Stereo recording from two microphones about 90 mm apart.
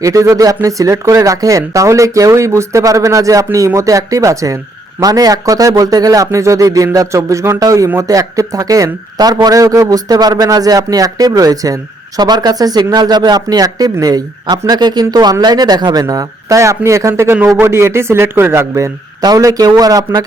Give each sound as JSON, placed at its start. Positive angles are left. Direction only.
{"t": 0.0, "sound": "speech", "side_deg": -40}
{"t": 19.2, "sound": "speech", "side_deg": -45}